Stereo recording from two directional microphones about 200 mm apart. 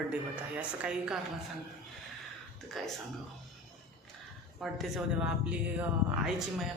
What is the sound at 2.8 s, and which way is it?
Speech, centre (ahead or behind).